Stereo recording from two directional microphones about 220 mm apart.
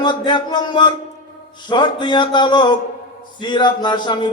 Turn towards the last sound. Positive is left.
turn(degrees=20)  # may be behind; listen again after turning